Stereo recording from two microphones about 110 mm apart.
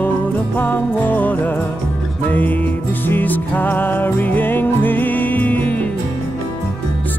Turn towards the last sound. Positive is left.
turn(degrees=15)  # may be behind; listen again after turning